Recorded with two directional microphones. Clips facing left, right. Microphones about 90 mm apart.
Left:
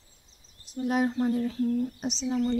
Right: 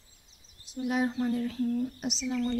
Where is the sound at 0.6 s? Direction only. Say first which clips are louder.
Left 3 dB; 40° left (ahead or behind).